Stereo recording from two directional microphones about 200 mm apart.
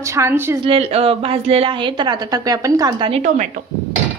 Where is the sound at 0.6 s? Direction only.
30° right (ahead or behind).